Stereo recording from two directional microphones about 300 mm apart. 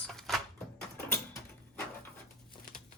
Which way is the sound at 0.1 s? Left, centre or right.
Centre.